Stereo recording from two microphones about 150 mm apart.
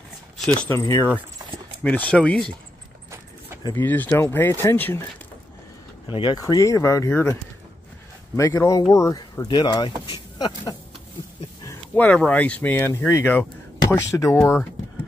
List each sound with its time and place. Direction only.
0.7 s speech: 20° left (ahead or behind)
1.8 s speech: 10° left (ahead or behind)
3.7 s speech: 10° left (ahead or behind)
6.0 s speech: 30° left (ahead or behind)
8.4 s speech: 20° left (ahead or behind)
11.9 s speech: 10° left (ahead or behind)